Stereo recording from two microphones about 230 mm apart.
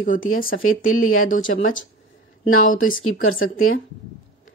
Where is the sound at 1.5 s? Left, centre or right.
Left.